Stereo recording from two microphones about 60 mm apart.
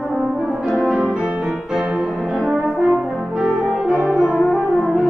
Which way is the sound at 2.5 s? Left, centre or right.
Centre.